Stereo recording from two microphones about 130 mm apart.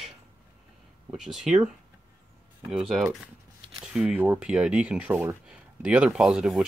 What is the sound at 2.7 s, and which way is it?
Speech, centre (ahead or behind).